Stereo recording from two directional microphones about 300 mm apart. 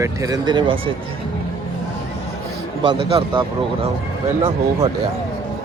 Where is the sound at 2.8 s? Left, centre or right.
Centre.